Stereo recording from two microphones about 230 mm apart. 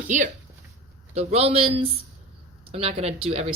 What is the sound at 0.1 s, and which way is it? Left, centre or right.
Speech, right.